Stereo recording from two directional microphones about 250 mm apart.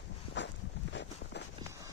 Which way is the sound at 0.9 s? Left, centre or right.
Left.